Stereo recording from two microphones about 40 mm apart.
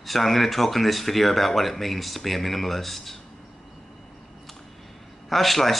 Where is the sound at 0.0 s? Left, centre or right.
Centre.